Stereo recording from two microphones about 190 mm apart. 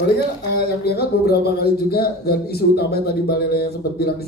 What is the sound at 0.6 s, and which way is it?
A man's voice, 55° left (ahead or behind).